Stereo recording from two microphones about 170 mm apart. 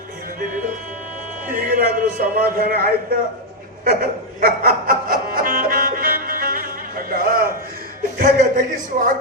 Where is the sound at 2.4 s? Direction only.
55° right (ahead or behind).